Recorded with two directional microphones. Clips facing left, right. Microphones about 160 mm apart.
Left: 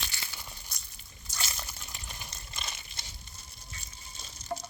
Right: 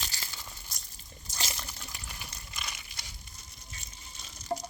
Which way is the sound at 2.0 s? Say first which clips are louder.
Even; 25° left (ahead or behind).